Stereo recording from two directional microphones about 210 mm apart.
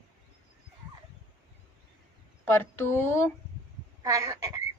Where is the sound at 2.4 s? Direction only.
10° left (ahead or behind).